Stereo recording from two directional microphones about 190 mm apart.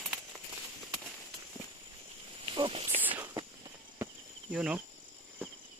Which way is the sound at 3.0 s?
10° right (ahead or behind).